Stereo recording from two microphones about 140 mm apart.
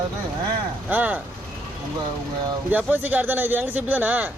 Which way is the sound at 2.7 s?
15° right (ahead or behind).